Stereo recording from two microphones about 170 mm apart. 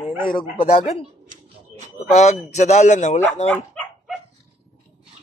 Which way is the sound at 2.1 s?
40° left (ahead or behind).